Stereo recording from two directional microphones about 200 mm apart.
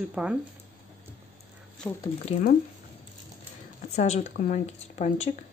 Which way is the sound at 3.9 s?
35° left (ahead or behind).